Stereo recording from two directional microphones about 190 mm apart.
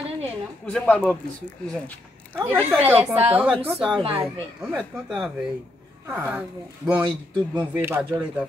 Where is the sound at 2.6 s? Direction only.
10° right (ahead or behind).